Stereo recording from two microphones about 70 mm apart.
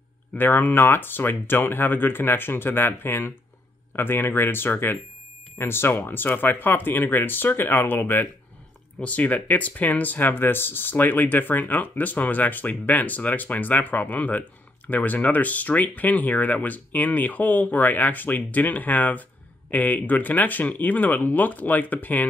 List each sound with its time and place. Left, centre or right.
0.3 s speech: left